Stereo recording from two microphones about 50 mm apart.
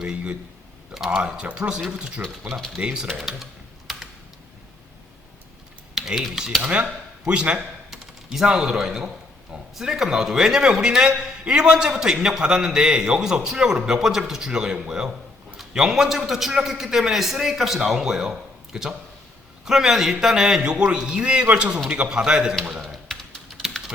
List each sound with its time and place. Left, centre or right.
0.0 s a man's voice: centre
2.7 s a man's voice: centre
5.9 s typing: centre
6.6 s a man's voice: right
7.9 s a man's voice: centre
22.7 s typing: centre